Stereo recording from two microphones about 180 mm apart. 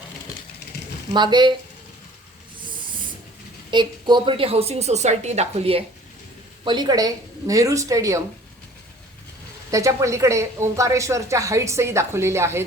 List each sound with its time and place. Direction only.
1.1 s speech: 25° right (ahead or behind)
3.7 s a woman's voice: 25° right (ahead or behind)
9.7 s speech: 15° right (ahead or behind)